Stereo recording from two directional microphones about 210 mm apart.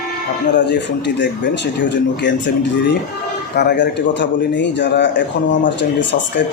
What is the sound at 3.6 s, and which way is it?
Speech, 55° left (ahead or behind).